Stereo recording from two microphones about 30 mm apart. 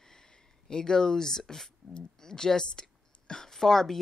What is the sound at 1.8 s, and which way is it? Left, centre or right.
Speech, centre.